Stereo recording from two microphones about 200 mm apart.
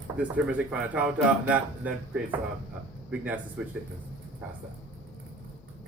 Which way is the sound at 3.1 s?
10° right (ahead or behind).